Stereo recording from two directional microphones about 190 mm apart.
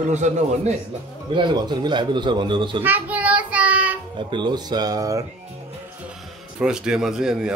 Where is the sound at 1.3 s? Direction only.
25° right (ahead or behind).